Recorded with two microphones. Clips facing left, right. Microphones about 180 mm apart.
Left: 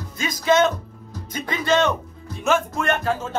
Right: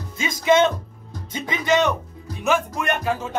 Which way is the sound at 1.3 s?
15° right (ahead or behind).